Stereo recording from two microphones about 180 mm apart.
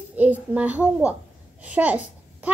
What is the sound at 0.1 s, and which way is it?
A child's voice, 10° right (ahead or behind).